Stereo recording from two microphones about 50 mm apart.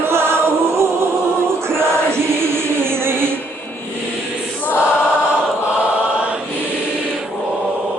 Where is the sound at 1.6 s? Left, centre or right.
Right.